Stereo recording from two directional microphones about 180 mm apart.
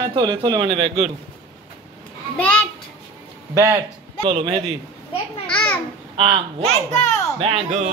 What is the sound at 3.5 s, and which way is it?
Speech, 10° right (ahead or behind).